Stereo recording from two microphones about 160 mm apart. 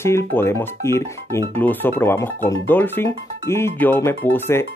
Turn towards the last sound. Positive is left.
turn(degrees=15)  # may be behind; listen again after turning